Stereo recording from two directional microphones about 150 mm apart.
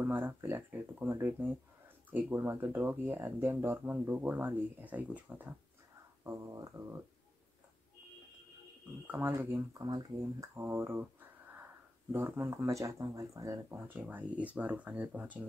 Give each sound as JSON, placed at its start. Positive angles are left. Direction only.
{"t": 0.0, "sound": "speech", "side_deg": -15}
{"t": 6.2, "sound": "speech", "side_deg": -20}
{"t": 9.0, "sound": "speech", "side_deg": -10}